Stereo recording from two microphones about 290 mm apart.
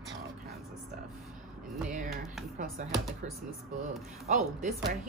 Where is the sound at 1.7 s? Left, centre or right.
Centre.